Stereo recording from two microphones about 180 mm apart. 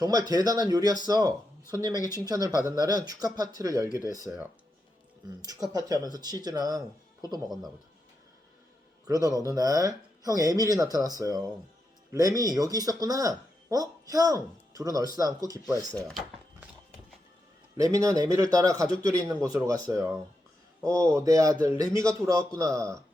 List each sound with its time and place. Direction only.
0.0 s a man's voice: 20° right (ahead or behind)
5.5 s speech: 20° right (ahead or behind)
7.4 s a man's voice: centre (ahead or behind)
9.0 s speech: 20° right (ahead or behind)
16.0 s drawer open or close: centre (ahead or behind)
17.7 s a man's voice: 20° right (ahead or behind)